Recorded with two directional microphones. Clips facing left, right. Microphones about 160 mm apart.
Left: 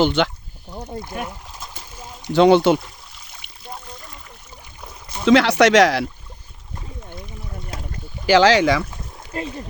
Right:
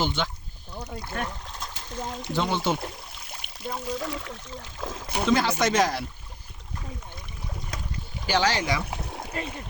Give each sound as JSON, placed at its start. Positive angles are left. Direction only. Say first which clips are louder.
{"t": 0.0, "sound": "speech", "louder": "left 10 dB", "side_deg": 75}
{"t": 1.0, "sound": "speech", "louder": "left 2 dB", "side_deg": 10}
{"t": 2.3, "sound": "speech", "louder": "left 13 dB", "side_deg": 75}
{"t": 3.8, "sound": "speech", "louder": "right 10 dB", "side_deg": -90}
{"t": 4.8, "sound": "a sound", "louder": "right 5 dB", "side_deg": -90}
{"t": 5.2, "sound": "speech", "louder": "left 9 dB", "side_deg": 80}
{"t": 7.7, "sound": "boat", "louder": "left 5 dB", "side_deg": 30}
{"t": 8.3, "sound": "speech", "louder": "left 10 dB", "side_deg": 90}
{"t": 8.9, "sound": "a sound", "louder": "right 4 dB", "side_deg": -70}
{"t": 9.3, "sound": "speech", "louder": "left 7 dB", "side_deg": 35}